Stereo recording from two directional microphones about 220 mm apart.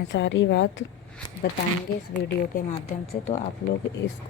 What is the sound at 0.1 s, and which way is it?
Speech, 55° left (ahead or behind).